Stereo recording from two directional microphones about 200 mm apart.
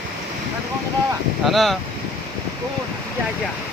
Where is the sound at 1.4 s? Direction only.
Centre (ahead or behind).